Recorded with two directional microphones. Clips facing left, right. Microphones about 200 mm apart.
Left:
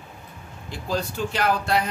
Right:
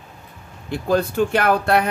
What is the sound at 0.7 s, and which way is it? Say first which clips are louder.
Speech: right 8 dB; 55° right (ahead or behind).